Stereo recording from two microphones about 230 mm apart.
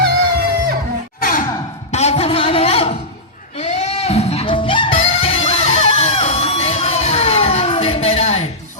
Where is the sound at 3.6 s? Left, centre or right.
Left.